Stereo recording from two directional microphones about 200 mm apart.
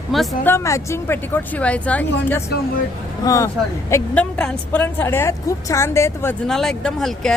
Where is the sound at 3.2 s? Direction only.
15° left (ahead or behind).